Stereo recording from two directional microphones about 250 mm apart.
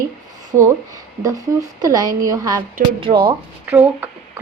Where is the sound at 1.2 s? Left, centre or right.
Centre.